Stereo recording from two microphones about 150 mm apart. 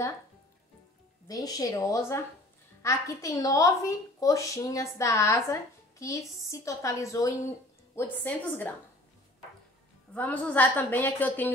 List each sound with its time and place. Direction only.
1.2 s a woman's voice: 25° left (ahead or behind)
10.1 s a woman's voice: 10° left (ahead or behind)